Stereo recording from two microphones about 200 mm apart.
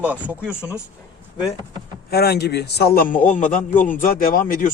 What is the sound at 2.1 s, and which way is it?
A man's voice, 50° left (ahead or behind).